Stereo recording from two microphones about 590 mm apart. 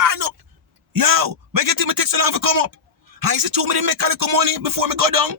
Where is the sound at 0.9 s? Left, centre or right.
Right.